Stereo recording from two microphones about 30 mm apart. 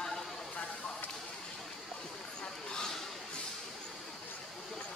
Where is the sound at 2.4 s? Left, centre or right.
Left.